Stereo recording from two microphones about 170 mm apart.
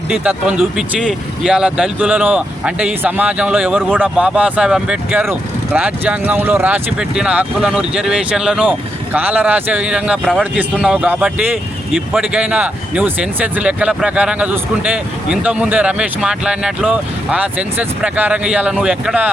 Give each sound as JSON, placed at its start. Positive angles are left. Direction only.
{"t": 0.1, "sound": "speech", "side_deg": -5}